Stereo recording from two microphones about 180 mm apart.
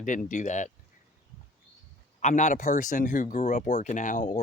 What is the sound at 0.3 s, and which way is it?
Speech, 45° left (ahead or behind).